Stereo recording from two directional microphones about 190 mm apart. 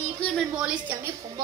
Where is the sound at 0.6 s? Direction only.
5° right (ahead or behind).